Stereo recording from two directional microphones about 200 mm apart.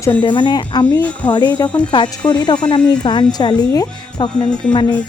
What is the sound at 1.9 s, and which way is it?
A woman's voice, 25° left (ahead or behind).